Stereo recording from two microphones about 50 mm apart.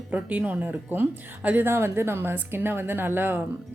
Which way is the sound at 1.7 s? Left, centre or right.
Right.